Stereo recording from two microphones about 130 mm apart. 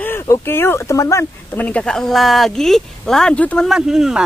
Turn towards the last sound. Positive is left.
turn(degrees=-5)  # may be behind; listen again after turning